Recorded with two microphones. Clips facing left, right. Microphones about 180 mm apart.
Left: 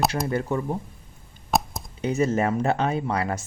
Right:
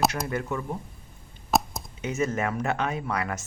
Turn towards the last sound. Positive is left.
turn(degrees=30)  # may be behind; listen again after turning